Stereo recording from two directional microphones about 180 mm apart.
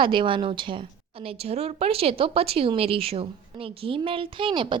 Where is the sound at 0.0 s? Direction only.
25° right (ahead or behind).